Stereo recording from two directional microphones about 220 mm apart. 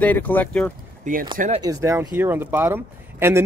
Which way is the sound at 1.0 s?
40° right (ahead or behind).